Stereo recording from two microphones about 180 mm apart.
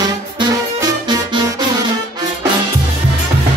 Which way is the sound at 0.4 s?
25° right (ahead or behind).